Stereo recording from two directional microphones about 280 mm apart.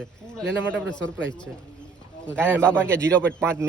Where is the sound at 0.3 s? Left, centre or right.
Centre.